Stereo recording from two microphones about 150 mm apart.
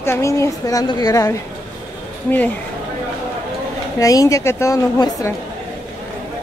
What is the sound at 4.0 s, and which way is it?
A woman's voice, 20° left (ahead or behind).